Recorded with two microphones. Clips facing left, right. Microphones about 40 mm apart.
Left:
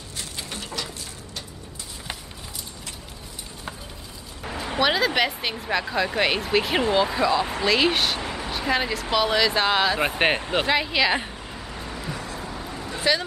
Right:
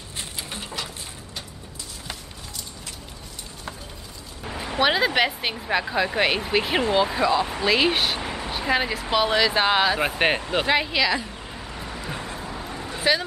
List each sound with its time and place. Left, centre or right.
0.5 s a sound: right
4.7 s speech: centre
9.9 s speech: centre
10.7 s speech: centre
11.5 s vehicle: centre
12.1 s vehicle: right
12.4 s vehicle: centre